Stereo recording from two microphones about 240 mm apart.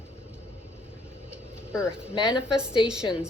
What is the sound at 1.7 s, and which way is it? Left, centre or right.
Speech, centre.